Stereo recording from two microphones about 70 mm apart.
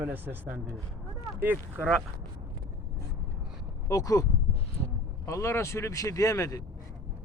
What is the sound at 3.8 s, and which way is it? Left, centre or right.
Speech, left.